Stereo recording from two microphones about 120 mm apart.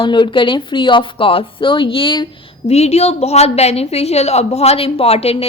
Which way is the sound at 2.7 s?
60° left (ahead or behind).